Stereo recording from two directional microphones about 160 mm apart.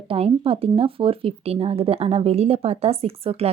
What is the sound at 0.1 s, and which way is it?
Speech, 35° right (ahead or behind).